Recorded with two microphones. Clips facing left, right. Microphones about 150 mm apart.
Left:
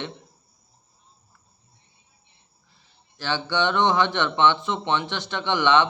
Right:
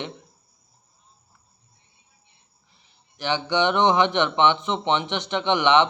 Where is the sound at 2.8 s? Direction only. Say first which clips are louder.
Right 4 dB; 15° right (ahead or behind).